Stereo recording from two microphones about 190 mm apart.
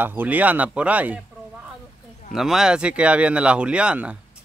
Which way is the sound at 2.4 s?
Centre (ahead or behind).